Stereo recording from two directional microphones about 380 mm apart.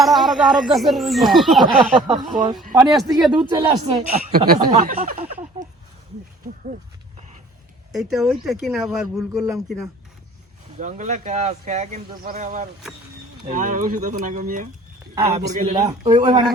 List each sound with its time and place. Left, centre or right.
0.0 s speech: centre
1.6 s speech: centre
8.1 s speech: centre
10.8 s speech: centre